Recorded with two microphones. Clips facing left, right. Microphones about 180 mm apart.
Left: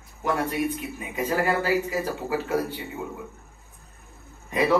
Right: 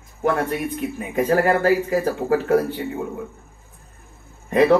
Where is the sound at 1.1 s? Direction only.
50° right (ahead or behind).